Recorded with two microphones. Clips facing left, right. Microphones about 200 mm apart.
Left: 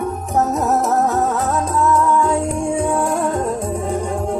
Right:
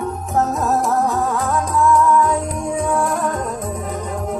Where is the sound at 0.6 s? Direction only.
20° left (ahead or behind).